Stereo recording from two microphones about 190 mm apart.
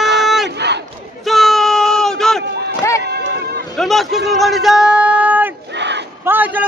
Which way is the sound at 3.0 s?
60° right (ahead or behind).